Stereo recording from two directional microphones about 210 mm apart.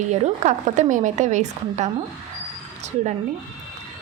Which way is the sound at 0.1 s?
35° right (ahead or behind).